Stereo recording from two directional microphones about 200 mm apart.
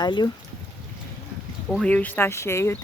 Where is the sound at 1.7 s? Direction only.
5° left (ahead or behind).